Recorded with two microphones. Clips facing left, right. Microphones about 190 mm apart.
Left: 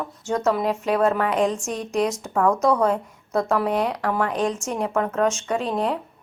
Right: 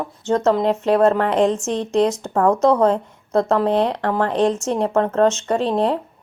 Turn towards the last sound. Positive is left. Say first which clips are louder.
# right 5 dB
turn(degrees=-30)  # may be behind; listen again after turning